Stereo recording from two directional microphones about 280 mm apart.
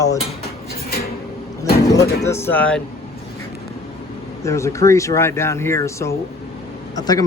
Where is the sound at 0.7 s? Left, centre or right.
Left.